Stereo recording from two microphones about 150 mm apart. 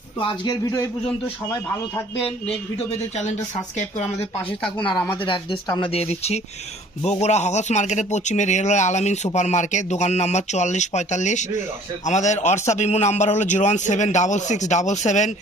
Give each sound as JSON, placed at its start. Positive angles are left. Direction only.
{"t": 0.2, "sound": "speech", "side_deg": 35}
{"t": 0.6, "sound": "speech", "side_deg": 20}
{"t": 2.7, "sound": "speech", "side_deg": 50}
{"t": 5.1, "sound": "speech", "side_deg": 35}
{"t": 5.9, "sound": "speech", "side_deg": 45}